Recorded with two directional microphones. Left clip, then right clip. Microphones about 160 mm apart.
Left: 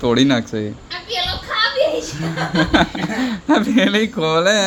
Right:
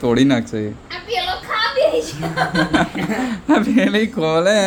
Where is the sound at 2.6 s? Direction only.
20° left (ahead or behind).